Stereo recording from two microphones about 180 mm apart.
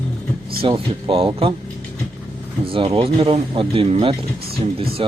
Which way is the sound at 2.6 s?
30° right (ahead or behind).